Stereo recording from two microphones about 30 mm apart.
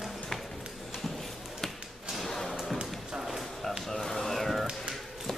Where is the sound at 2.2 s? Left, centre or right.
Centre.